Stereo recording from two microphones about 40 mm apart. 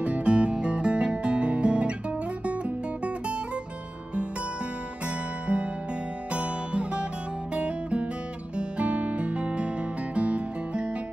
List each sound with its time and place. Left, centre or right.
0.0 s music: right
5.0 s music: right